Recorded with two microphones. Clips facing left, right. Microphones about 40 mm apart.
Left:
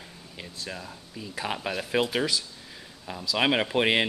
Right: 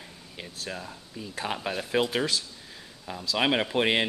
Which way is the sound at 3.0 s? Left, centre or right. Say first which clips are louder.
Left 1 dB; centre.